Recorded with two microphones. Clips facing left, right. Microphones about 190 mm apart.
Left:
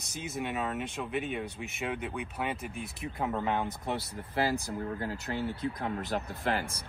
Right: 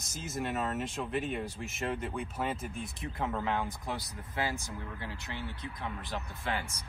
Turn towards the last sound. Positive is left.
turn(degrees=35)  # may be behind; listen again after turning